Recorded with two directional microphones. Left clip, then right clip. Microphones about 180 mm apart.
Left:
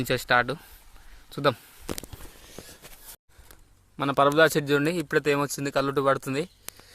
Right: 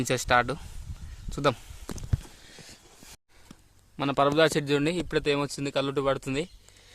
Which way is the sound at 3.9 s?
Centre (ahead or behind).